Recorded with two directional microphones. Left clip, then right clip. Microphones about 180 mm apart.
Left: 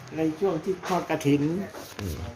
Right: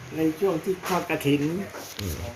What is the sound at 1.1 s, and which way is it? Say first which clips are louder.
Speech: even; 30° left (ahead or behind).